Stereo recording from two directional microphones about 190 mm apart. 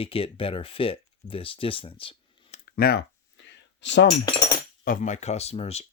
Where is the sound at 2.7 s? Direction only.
55° left (ahead or behind).